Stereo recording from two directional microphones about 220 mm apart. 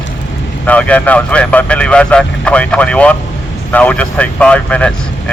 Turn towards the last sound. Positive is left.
turn(degrees=5)  # may be behind; listen again after turning